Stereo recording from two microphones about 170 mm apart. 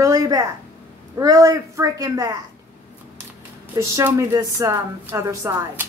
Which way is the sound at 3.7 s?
15° right (ahead or behind).